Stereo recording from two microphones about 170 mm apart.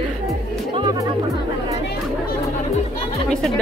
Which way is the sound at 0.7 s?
25° right (ahead or behind).